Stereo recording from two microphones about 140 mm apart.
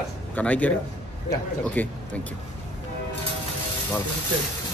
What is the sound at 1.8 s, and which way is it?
Speech, 15° left (ahead or behind).